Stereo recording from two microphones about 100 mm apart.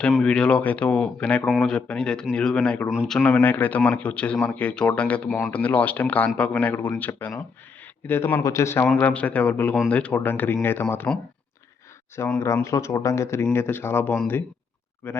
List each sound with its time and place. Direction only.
0.1 s speech: 5° left (ahead or behind); by 8.9 s 25° left (ahead or behind)
9.0 s speech: 15° left (ahead or behind)
11.1 s speech: 5° left (ahead or behind)
12.2 s speech: 30° left (ahead or behind)